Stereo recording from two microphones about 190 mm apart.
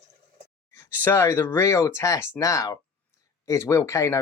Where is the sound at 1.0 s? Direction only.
10° left (ahead or behind).